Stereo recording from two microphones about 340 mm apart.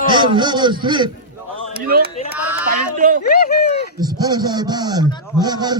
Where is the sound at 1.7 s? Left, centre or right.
Right.